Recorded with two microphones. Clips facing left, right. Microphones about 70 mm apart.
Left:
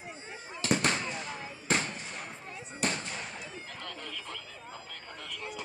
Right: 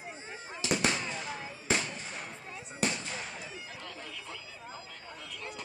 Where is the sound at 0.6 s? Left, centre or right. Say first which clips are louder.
Left 3 dB; left.